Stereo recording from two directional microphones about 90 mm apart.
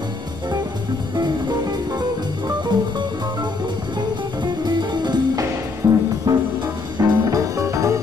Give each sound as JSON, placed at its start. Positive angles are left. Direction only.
{"t": 1.1, "sound": "music", "side_deg": -50}
{"t": 4.6, "sound": "music", "side_deg": -55}
{"t": 5.8, "sound": "music", "side_deg": -30}
{"t": 6.3, "sound": "music", "side_deg": -45}